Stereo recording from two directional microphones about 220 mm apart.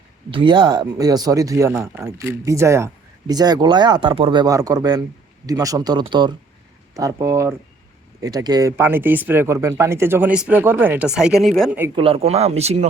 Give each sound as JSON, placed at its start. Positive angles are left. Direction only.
{"t": 0.3, "sound": "speech", "side_deg": -20}
{"t": 11.9, "sound": "speech", "side_deg": -25}